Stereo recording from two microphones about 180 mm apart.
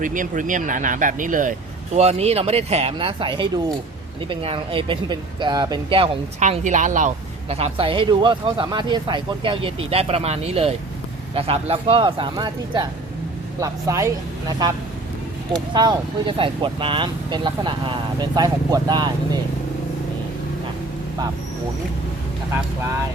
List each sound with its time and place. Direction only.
0.0 s speech: 45° right (ahead or behind)
2.0 s speech: 35° right (ahead or behind)
6.4 s speech: 45° right (ahead or behind); by 14.7 s 20° right (ahead or behind)
15.7 s speech: 25° right (ahead or behind)